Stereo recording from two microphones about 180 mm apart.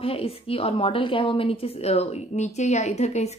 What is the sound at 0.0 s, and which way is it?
A woman's voice, 30° left (ahead or behind).